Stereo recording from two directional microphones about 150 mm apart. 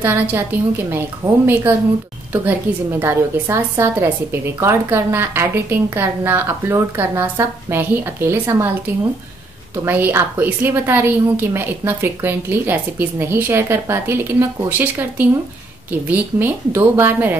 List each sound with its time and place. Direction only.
0.0 s a woman's voice: 15° right (ahead or behind)
9.8 s a woman's voice: 15° right (ahead or behind)